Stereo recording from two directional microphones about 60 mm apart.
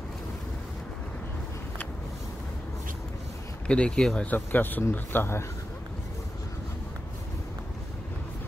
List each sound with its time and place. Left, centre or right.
3.6 s speech: centre
4.2 s speech: left